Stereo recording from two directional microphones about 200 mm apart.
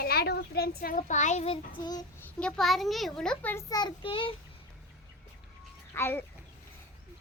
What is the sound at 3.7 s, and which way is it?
Speech, 20° left (ahead or behind).